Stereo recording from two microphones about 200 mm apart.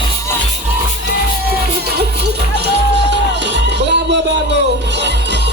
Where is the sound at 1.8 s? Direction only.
55° right (ahead or behind).